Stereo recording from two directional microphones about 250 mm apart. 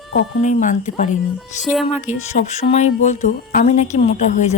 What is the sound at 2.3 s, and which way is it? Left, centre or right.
Speech, left.